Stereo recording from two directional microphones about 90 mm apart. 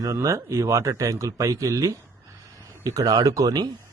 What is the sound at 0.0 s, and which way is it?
Speech, 40° right (ahead or behind).